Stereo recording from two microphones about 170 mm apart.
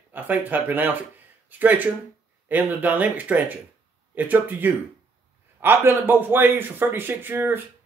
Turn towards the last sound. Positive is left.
turn(degrees=-10)  # may be behind; listen again after turning